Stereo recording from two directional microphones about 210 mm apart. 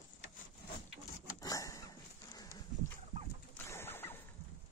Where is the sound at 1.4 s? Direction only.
15° left (ahead or behind).